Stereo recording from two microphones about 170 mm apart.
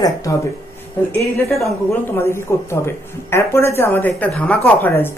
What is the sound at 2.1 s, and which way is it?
Speech, 15° left (ahead or behind).